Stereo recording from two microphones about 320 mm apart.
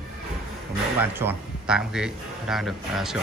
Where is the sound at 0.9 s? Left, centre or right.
Centre.